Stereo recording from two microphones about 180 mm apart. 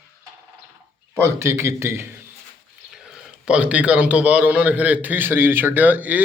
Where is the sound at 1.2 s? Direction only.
15° right (ahead or behind).